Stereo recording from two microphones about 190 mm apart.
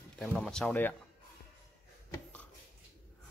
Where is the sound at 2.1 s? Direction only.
10° left (ahead or behind).